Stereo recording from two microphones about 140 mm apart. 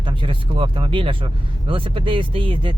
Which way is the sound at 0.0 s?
35° right (ahead or behind).